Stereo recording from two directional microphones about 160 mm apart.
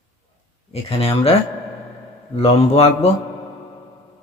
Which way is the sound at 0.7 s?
40° left (ahead or behind).